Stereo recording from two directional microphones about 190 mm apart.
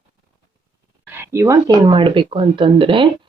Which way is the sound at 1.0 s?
10° right (ahead or behind).